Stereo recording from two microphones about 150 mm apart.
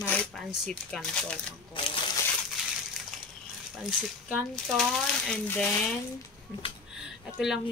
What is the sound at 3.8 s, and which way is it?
Speech, 5° right (ahead or behind).